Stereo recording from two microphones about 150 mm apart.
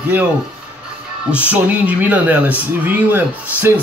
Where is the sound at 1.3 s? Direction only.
10° right (ahead or behind).